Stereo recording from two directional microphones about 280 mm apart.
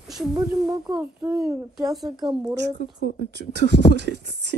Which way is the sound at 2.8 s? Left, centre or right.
Right.